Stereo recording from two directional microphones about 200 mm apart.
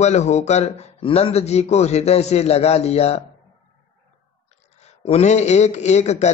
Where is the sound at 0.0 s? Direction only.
35° left (ahead or behind).